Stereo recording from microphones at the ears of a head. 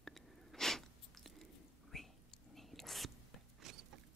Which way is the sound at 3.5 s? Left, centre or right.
Right.